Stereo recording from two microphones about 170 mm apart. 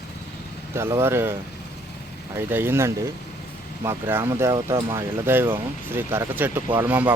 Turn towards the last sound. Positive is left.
turn(degrees=-10)  # may be behind; listen again after turning